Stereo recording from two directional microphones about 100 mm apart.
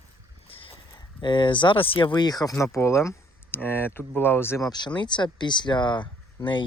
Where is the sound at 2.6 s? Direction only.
30° left (ahead or behind).